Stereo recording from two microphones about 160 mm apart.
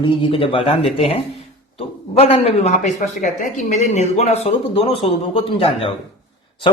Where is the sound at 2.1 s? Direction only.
40° left (ahead or behind).